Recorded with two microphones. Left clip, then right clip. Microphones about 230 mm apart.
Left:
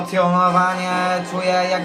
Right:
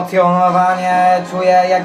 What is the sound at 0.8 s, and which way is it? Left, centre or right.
Mantra, left.